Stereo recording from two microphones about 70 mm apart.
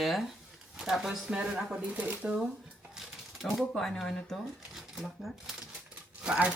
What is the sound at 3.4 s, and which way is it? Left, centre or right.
Speech, centre.